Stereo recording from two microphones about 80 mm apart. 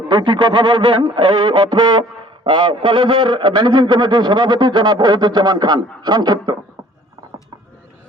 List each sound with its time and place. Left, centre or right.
0.1 s speech: right
2.4 s a man's voice: right